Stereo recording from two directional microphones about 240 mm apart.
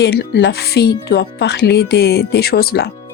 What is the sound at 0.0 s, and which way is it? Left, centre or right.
Speech, left.